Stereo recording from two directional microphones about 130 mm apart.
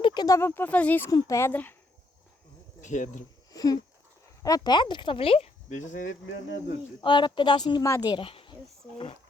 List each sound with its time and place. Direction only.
0.0 s a sound: 35° left (ahead or behind)
0.3 s speech: 15° left (ahead or behind)
2.8 s speech: 70° left (ahead or behind)
3.5 s a sound: 30° left (ahead or behind)
4.4 s speech: 30° left (ahead or behind); by 6.1 s 85° left
7.0 s a woman's voice: 35° left (ahead or behind)
8.1 s speech: 45° left (ahead or behind)